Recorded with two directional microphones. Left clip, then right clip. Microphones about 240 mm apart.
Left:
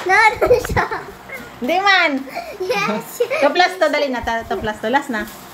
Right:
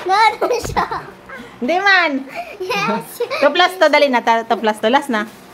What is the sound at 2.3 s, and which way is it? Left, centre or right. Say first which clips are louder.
A child's voice: left 1 dB; centre.